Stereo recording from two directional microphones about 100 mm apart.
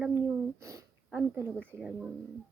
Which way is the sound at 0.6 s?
30° right (ahead or behind).